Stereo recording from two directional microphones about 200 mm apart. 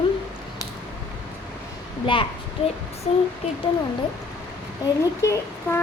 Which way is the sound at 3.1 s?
30° left (ahead or behind).